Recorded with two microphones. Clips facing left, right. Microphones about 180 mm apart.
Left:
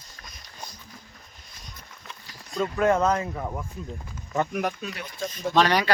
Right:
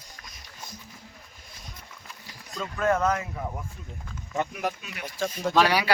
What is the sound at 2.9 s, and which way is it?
Speech, 35° left (ahead or behind).